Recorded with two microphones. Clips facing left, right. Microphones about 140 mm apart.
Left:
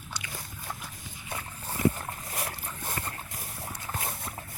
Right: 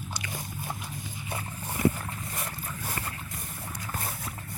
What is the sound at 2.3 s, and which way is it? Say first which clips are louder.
Dog: even; centre (ahead or behind).